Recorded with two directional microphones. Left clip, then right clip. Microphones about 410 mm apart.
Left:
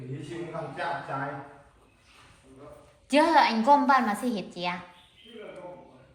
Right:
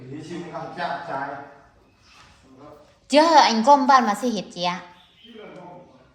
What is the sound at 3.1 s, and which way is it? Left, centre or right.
A woman's voice, centre.